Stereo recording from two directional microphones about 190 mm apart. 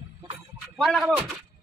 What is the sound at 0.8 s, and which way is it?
Speech, centre (ahead or behind).